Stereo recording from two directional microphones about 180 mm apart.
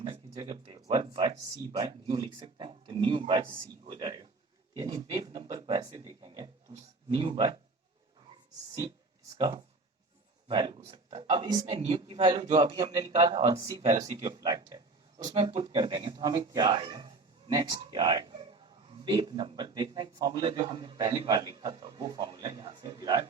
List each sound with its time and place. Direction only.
0.0 s a sound: 25° right (ahead or behind)
0.9 s speech: 30° right (ahead or behind)
9.4 s speech: 25° right (ahead or behind)